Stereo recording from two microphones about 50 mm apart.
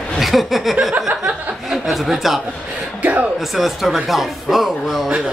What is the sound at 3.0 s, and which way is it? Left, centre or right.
Speech, right.